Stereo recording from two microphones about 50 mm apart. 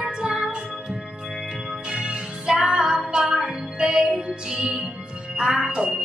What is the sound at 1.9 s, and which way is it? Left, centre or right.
Music, centre.